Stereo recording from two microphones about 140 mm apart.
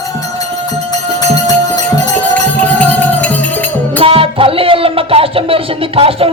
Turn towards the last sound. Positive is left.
turn(degrees=-40)  # may be behind; listen again after turning